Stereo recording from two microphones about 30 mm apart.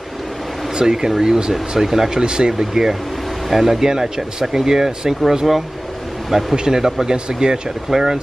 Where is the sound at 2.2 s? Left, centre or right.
Right.